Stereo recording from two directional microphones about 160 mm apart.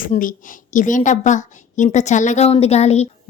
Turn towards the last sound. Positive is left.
turn(degrees=40)  # may be behind; listen again after turning